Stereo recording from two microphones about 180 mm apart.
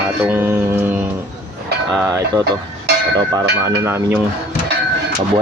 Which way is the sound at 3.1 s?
20° right (ahead or behind).